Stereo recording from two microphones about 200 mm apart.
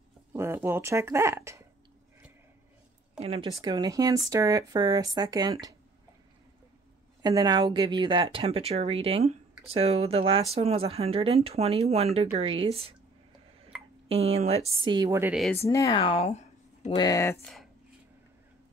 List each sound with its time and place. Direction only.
0.3 s speech: 10° right (ahead or behind)
3.2 s speech: 30° right (ahead or behind)
3.6 s speech: 20° right (ahead or behind)
7.2 s speech: 20° right (ahead or behind)
14.0 s speech: 30° right (ahead or behind); by 15.3 s 15° right (ahead or behind)
15.6 s speech: 15° left (ahead or behind); by 16.9 s 35° left (ahead or behind)
16.9 s speech: 20° left (ahead or behind)